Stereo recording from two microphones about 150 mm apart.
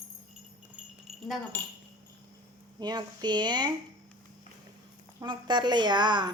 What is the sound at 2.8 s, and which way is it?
Speech, 30° right (ahead or behind).